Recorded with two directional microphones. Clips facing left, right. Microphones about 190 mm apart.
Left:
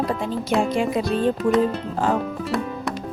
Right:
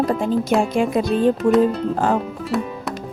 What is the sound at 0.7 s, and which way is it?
Speech, 50° right (ahead or behind).